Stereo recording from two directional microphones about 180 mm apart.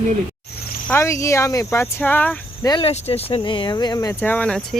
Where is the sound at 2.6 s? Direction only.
20° left (ahead or behind).